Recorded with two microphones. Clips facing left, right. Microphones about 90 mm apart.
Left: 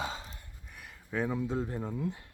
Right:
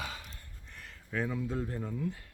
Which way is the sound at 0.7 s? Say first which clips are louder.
Left 1 dB; 10° left (ahead or behind).